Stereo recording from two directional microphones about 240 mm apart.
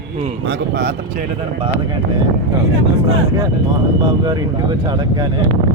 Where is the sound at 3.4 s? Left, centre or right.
Centre.